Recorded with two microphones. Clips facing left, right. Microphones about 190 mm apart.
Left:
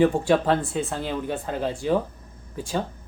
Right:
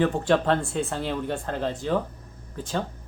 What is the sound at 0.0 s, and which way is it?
Speech, 10° left (ahead or behind).